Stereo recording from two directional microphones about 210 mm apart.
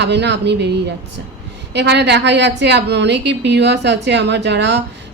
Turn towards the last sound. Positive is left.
turn(degrees=-55)  # may be behind; listen again after turning